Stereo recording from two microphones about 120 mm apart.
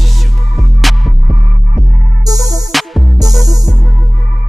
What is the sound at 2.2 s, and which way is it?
Music, 30° right (ahead or behind).